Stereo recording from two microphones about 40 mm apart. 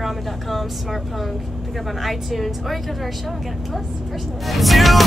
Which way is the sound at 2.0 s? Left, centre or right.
Centre.